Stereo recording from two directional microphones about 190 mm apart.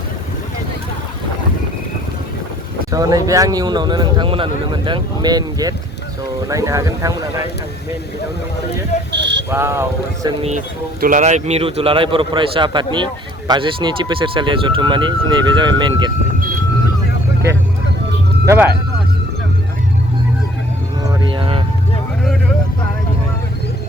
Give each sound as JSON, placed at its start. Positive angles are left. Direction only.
{"t": 2.9, "sound": "speech", "side_deg": -20}
{"t": 9.1, "sound": "a sound", "side_deg": -65}
{"t": 9.5, "sound": "speech", "side_deg": -15}
{"t": 11.0, "sound": "speech", "side_deg": -40}
{"t": 18.4, "sound": "speech", "side_deg": -10}
{"t": 21.2, "sound": "vehicle", "side_deg": -25}